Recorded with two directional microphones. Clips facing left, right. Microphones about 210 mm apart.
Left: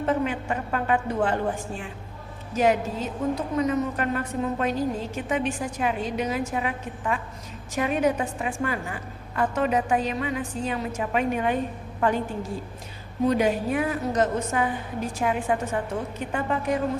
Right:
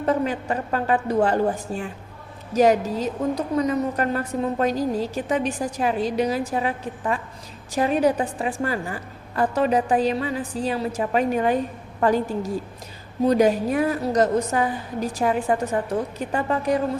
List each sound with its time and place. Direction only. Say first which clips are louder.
0.0 s a woman's voice: right 2 dB; 40° right (ahead or behind)
2.5 s a woman's voice: right 4 dB; 40° right (ahead or behind)